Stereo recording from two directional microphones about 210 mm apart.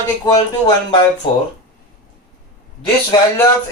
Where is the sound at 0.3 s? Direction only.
20° left (ahead or behind).